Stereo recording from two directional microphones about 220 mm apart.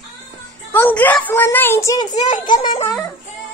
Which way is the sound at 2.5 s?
25° left (ahead or behind).